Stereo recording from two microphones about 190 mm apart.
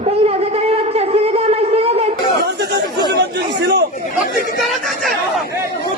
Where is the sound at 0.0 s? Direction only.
35° right (ahead or behind).